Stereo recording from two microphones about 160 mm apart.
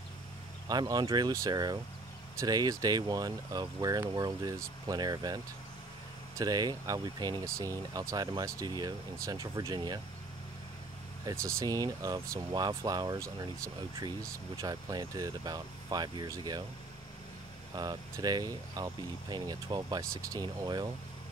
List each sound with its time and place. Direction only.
0.7 s speech: 25° right (ahead or behind)
11.2 s speech: 20° right (ahead or behind)
14.6 s speech: 25° right (ahead or behind)
17.7 s speech: 25° right (ahead or behind)